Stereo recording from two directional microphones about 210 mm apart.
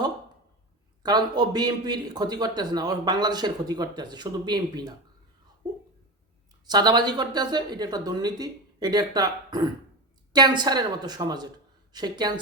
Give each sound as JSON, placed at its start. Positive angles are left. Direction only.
{"t": 1.0, "sound": "a man's voice", "side_deg": -20}
{"t": 6.7, "sound": "a man's voice", "side_deg": -20}